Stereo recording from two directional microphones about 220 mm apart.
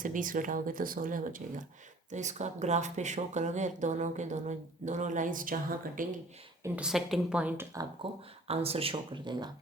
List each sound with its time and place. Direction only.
0.0 s speech: 35° right (ahead or behind)
6.6 s speech: 5° right (ahead or behind)
8.4 s speech: 25° right (ahead or behind)